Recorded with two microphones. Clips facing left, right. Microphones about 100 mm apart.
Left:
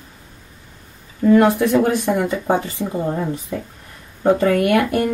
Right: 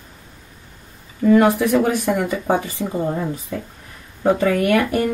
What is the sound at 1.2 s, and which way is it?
Speech, centre (ahead or behind).